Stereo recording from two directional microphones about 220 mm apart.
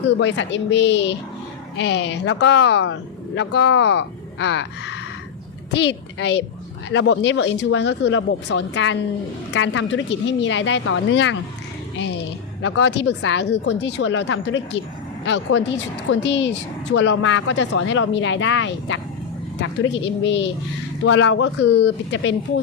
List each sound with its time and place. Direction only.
0.2 s a woman's voice: 55° left (ahead or behind)
12.6 s speech: 55° left (ahead or behind)
16.2 s a woman's voice: 55° left (ahead or behind)